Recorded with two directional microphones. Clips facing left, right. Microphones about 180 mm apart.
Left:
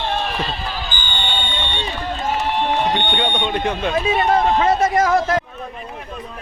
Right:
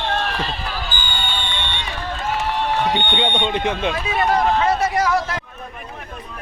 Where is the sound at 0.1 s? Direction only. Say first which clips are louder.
Right 1 dB; 10° left (ahead or behind).